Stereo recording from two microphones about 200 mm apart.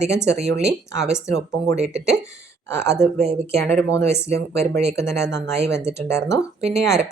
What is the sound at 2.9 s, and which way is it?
Speech, 35° right (ahead or behind).